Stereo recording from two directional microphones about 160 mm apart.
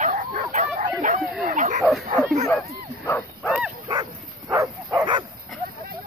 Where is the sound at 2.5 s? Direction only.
15° left (ahead or behind).